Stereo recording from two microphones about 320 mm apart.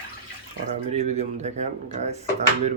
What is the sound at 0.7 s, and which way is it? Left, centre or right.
Speech, centre.